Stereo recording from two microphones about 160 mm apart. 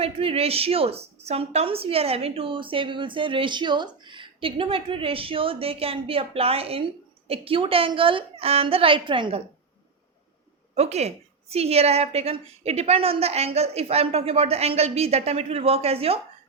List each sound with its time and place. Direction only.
0.0 s a woman's voice: 40° right (ahead or behind)
10.8 s a woman's voice: 45° right (ahead or behind)